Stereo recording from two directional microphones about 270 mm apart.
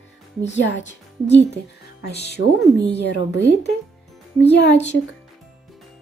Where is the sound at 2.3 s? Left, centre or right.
Left.